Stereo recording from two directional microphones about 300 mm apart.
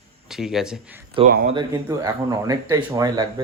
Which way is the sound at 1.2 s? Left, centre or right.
Right.